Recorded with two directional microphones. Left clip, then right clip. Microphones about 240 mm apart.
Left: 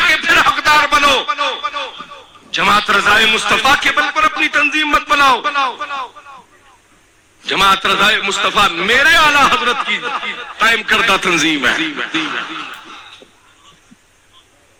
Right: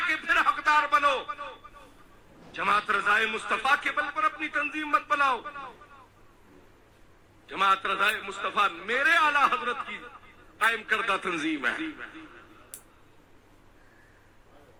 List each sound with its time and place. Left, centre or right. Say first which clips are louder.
0.0 s a sound: left 14 dB; left
2.6 s a man's voice: left 13 dB; left
7.4 s a man's voice: left 13 dB; left